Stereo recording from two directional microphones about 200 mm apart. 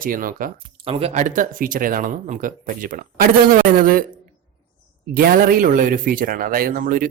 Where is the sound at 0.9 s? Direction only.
30° right (ahead or behind); by 4.0 s 45° right (ahead or behind).